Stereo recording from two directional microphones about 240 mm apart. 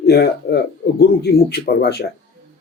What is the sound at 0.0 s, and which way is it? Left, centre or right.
Speech, left.